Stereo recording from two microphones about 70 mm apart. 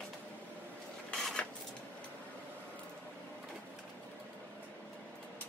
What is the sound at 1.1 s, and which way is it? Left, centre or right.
Dishes, centre.